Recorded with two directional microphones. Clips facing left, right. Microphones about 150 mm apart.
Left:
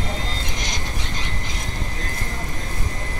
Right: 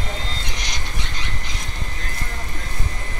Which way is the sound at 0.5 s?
45° left (ahead or behind).